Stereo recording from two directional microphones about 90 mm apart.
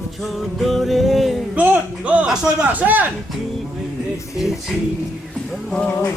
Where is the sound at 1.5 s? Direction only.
15° right (ahead or behind).